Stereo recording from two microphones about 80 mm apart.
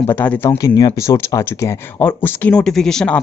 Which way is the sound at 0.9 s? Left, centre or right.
Left.